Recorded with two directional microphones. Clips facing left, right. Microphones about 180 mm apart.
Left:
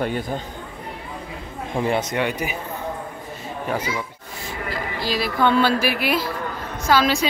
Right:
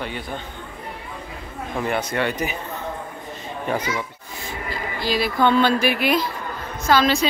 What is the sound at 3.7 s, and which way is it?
Speech, 10° left (ahead or behind).